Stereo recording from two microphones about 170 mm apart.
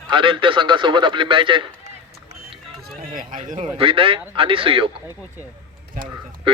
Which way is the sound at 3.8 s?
30° right (ahead or behind).